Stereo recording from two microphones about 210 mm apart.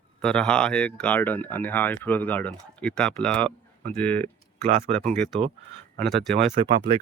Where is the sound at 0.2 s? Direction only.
5° left (ahead or behind).